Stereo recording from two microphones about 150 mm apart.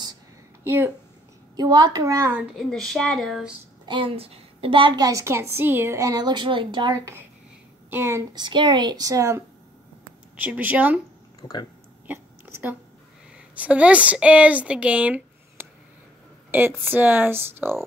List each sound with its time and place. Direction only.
0.7 s speech: 15° right (ahead or behind)
1.6 s a woman's voice: 30° right (ahead or behind)
2.5 s speech: centre (ahead or behind)
3.8 s a woman's voice: 35° right (ahead or behind)
7.9 s a woman's voice: 15° right (ahead or behind)
10.4 s speech: 10° right (ahead or behind)
11.4 s speech: 35° left (ahead or behind)
12.1 s a sound: 10° right (ahead or behind)
13.6 s speech: 10° right (ahead or behind)